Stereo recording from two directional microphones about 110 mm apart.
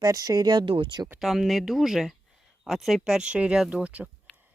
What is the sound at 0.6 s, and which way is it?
Speech, 50° right (ahead or behind).